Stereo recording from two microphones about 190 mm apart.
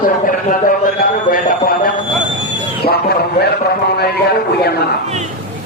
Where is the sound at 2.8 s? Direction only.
55° left (ahead or behind).